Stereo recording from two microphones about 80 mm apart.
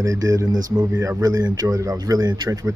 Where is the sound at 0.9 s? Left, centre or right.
Right.